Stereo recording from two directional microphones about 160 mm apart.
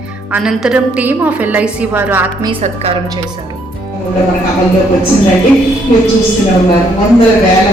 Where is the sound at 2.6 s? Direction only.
40° right (ahead or behind).